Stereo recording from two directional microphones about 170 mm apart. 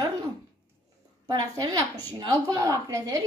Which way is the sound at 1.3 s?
20° right (ahead or behind).